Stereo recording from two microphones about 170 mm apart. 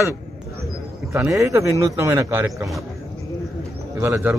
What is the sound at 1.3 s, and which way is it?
Speech, 15° right (ahead or behind).